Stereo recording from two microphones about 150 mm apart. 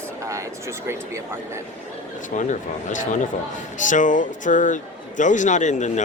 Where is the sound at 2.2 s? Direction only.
55° left (ahead or behind).